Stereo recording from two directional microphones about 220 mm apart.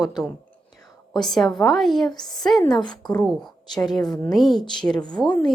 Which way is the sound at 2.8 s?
20° left (ahead or behind).